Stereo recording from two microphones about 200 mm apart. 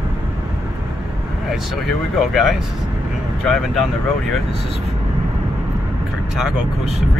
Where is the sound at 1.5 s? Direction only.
Centre (ahead or behind).